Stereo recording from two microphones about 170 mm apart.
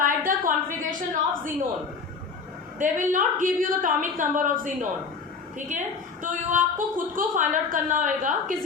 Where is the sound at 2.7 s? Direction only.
50° right (ahead or behind).